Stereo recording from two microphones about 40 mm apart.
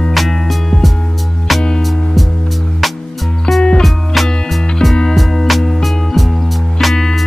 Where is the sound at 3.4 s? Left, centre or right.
Centre.